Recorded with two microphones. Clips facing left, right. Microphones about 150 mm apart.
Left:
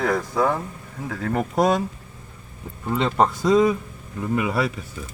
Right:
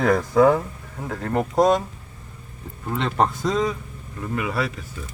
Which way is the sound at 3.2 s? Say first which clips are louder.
Left 4 dB; 5° left (ahead or behind).